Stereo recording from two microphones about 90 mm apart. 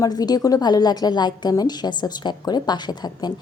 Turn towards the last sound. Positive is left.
turn(degrees=50)  # may be behind; listen again after turning